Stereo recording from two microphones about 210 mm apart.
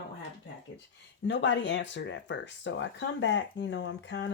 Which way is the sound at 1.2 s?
60° left (ahead or behind).